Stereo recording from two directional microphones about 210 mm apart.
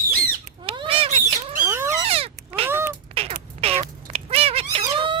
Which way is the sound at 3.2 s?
25° right (ahead or behind).